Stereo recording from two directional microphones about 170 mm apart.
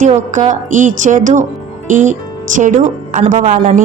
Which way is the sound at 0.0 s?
45° right (ahead or behind).